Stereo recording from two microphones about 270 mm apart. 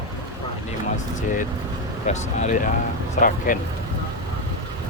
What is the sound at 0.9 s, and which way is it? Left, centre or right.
Speech, left.